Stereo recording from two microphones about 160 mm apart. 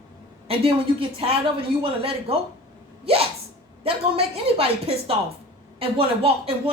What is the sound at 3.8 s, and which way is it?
Speech, 35° right (ahead or behind).